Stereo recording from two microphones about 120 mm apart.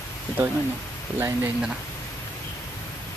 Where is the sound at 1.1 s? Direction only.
20° right (ahead or behind).